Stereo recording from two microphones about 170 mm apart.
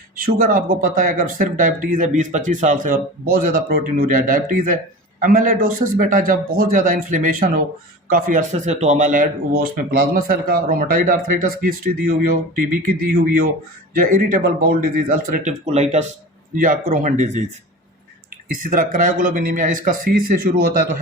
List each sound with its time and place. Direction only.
0.2 s speech: 55° right (ahead or behind)
15.6 s speech: 40° right (ahead or behind)
16.6 s speech: 50° right (ahead or behind)
18.5 s speech: 50° right (ahead or behind)